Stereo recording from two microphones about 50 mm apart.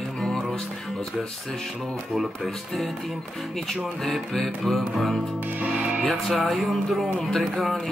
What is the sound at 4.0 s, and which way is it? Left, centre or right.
Speech, centre.